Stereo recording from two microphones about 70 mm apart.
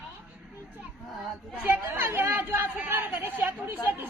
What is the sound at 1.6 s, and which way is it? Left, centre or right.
A woman's voice, right.